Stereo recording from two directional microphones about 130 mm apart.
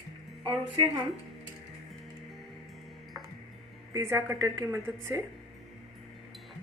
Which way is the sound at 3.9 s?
20° right (ahead or behind).